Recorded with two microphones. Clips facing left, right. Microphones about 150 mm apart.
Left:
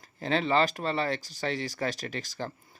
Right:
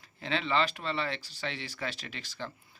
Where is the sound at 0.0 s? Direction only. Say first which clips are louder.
Left 5 dB; 40° left (ahead or behind).